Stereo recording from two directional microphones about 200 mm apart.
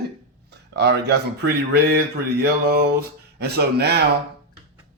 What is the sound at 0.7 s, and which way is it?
Speech, 55° right (ahead or behind).